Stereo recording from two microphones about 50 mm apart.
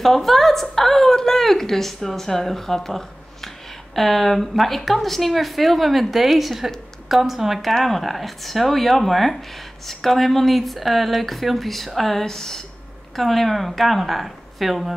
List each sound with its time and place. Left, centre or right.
0.0 s a woman's voice: centre